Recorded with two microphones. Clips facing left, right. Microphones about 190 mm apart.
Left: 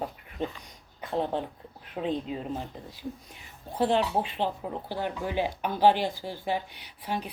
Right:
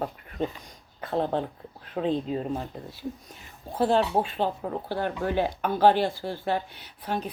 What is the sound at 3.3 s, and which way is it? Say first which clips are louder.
Speech: right 2 dB; 40° right (ahead or behind).